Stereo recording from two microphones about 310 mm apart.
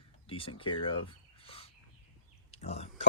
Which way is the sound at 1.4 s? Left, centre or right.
Centre.